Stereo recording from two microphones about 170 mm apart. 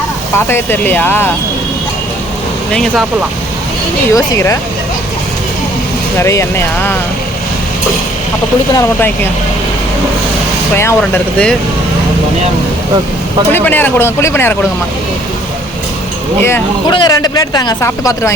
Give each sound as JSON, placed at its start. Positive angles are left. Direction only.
{"t": 0.3, "sound": "speech", "side_deg": 15}
{"t": 2.7, "sound": "speech", "side_deg": 0}
{"t": 4.1, "sound": "speech", "side_deg": 20}
{"t": 6.1, "sound": "speech", "side_deg": 15}
{"t": 8.7, "sound": "speech", "side_deg": 10}
{"t": 10.8, "sound": "speech", "side_deg": 15}
{"t": 13.5, "sound": "speech", "side_deg": 10}
{"t": 16.9, "sound": "speech", "side_deg": 25}